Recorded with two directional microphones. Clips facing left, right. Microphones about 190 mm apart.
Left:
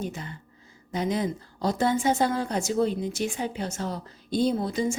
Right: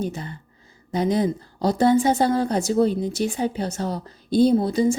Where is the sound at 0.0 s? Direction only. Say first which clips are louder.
Right 5 dB; 35° right (ahead or behind).